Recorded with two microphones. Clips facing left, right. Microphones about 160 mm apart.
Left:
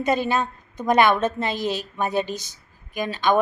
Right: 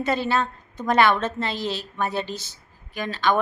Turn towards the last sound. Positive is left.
turn(degrees=15)  # may be behind; listen again after turning